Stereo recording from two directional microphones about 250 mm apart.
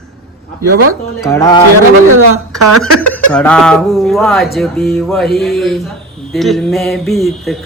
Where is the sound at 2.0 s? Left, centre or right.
Right.